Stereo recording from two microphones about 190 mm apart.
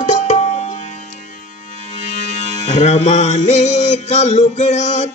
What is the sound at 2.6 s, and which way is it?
Music, 35° left (ahead or behind).